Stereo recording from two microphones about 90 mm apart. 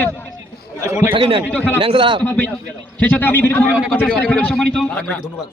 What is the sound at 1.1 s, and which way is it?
Speech, 75° right (ahead or behind).